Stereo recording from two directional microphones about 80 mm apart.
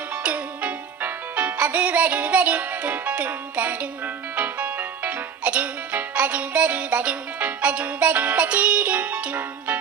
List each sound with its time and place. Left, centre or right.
0.2 s music: centre